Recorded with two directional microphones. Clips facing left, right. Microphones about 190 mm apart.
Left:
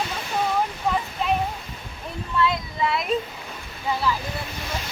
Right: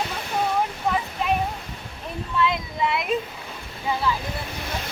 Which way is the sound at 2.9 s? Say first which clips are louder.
Even; centre (ahead or behind).